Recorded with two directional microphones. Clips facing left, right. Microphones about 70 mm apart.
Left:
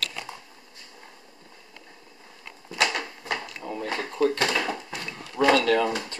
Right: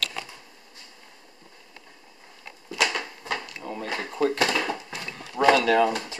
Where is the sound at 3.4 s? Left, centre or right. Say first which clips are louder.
Left 1 dB; centre.